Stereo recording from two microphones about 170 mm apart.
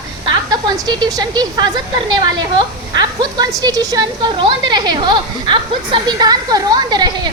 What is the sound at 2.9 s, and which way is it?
A woman's voice, 25° right (ahead or behind).